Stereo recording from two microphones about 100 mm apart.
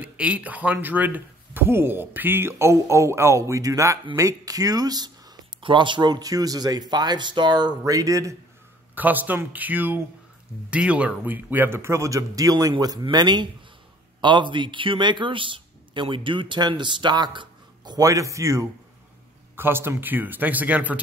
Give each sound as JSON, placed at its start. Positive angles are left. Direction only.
{"t": 0.0, "sound": "speech", "side_deg": -15}
{"t": 8.9, "sound": "speech", "side_deg": -20}
{"t": 13.0, "sound": "speech", "side_deg": -45}
{"t": 18.0, "sound": "speech", "side_deg": -35}